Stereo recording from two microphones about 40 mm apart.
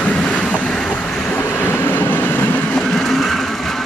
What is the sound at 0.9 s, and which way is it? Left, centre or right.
Vehicle, left.